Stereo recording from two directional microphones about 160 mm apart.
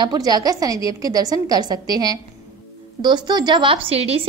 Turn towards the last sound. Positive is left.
turn(degrees=-40)  # may be behind; listen again after turning